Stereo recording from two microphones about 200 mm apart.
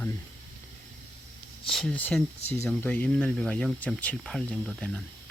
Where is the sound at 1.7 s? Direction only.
5° left (ahead or behind).